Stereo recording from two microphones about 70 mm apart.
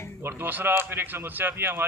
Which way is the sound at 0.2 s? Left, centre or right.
Right.